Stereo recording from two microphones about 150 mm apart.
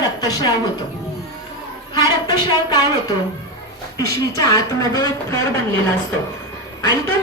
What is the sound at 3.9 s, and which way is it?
A woman's voice, 25° left (ahead or behind).